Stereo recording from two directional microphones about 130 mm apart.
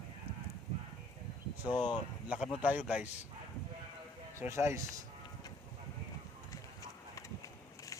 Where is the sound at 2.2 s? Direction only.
10° right (ahead or behind).